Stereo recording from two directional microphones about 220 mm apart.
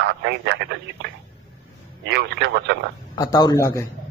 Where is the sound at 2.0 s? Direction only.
50° right (ahead or behind).